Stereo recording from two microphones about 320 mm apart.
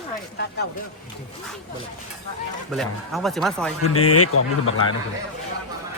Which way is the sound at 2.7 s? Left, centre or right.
Centre.